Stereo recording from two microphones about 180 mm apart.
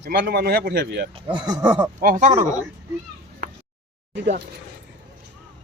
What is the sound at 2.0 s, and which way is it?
Speech, 45° right (ahead or behind).